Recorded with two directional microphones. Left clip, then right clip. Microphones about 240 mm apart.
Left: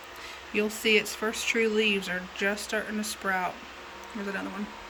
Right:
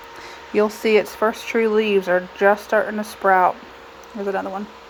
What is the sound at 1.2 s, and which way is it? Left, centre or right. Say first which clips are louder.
Speech: right 11 dB; right.